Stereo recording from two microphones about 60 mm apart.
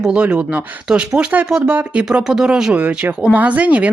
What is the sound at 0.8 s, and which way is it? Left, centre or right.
Speech, centre.